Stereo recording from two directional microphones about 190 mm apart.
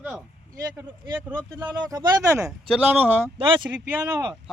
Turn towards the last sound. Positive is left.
turn(degrees=-15)  # may be behind; listen again after turning